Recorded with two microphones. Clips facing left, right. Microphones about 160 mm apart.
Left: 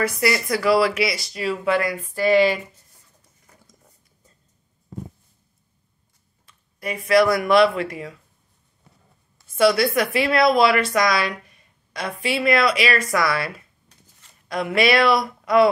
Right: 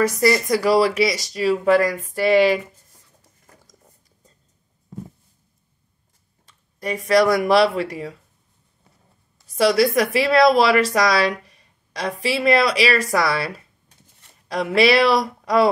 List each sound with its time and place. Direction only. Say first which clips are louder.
0.0 s speech: right 4 dB; 40° right (ahead or behind)
6.4 s speech: right 2 dB; 35° right (ahead or behind)
9.5 s speech: right 1 dB; 35° right (ahead or behind)
14.5 s speech: right 3 dB; 35° right (ahead or behind)